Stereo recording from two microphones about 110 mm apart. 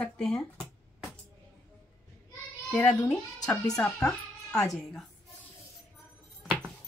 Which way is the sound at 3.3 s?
35° left (ahead or behind).